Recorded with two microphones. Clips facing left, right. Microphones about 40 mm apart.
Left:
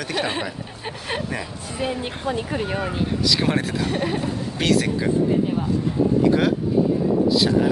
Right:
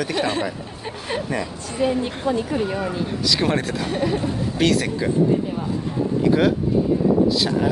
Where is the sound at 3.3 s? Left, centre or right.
Centre.